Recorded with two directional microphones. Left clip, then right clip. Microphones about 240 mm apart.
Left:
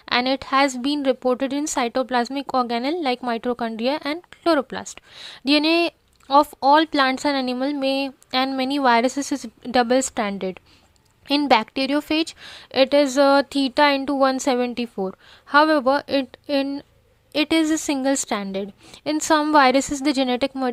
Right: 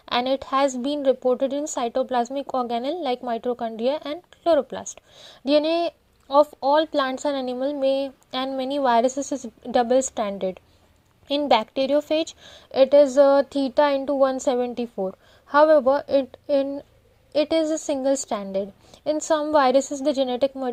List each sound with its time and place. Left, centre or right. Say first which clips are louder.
0.0 s speech: left 2 dB; centre